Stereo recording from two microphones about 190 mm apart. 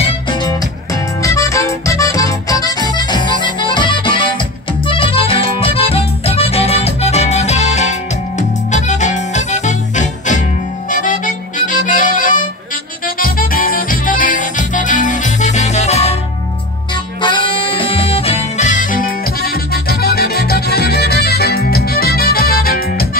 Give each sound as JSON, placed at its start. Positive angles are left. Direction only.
{"t": 0.0, "sound": "music", "side_deg": 25}